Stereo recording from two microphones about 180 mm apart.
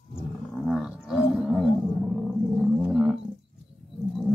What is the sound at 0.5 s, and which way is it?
Roaring cats, centre (ahead or behind).